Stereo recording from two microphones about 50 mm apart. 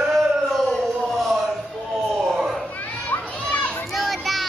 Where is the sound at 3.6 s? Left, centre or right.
Left.